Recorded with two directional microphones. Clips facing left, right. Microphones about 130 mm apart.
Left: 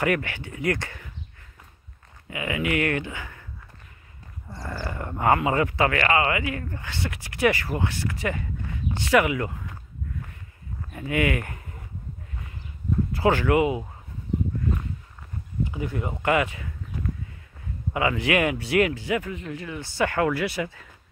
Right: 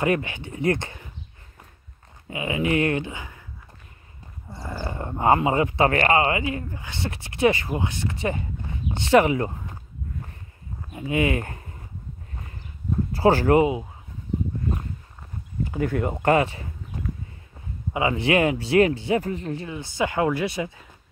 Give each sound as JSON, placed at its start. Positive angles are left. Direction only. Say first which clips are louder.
{"t": 0.0, "sound": "speech", "louder": "right 1 dB", "side_deg": -20}
{"t": 2.2, "sound": "speech", "louder": "right 2 dB", "side_deg": -25}
{"t": 4.6, "sound": "speech", "louder": "right 1 dB", "side_deg": -20}
{"t": 10.9, "sound": "speech", "louder": "right 2 dB", "side_deg": -20}
{"t": 13.1, "sound": "speech", "louder": "right 4 dB", "side_deg": -35}
{"t": 15.6, "sound": "speech", "louder": "right 5 dB", "side_deg": -50}
{"t": 16.1, "sound": "speech", "louder": "right 2 dB", "side_deg": -40}